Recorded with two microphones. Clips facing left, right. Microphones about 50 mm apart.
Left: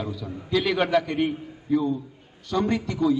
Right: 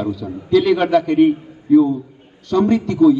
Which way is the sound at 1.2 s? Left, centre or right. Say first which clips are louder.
Right 12 dB; centre.